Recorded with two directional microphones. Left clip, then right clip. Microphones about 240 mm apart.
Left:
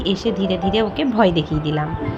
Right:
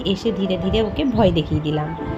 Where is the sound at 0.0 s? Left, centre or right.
Centre.